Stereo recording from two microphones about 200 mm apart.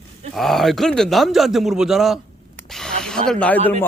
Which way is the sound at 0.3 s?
Centre (ahead or behind).